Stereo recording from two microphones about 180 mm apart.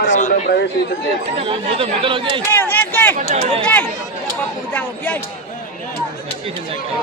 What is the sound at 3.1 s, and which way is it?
Speech, 40° right (ahead or behind).